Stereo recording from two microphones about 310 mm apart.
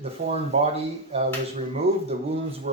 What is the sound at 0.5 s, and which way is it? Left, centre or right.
Speech, right.